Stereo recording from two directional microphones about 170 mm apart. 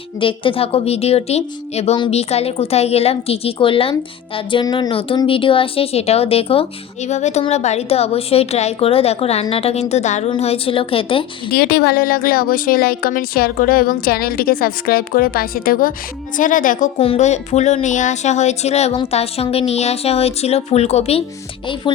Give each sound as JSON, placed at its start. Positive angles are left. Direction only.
{"t": 0.2, "sound": "speech", "side_deg": 30}
{"t": 11.5, "sound": "speech", "side_deg": 65}
{"t": 17.0, "sound": "speech", "side_deg": 40}